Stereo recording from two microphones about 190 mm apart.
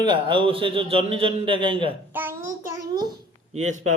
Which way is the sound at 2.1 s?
10° right (ahead or behind).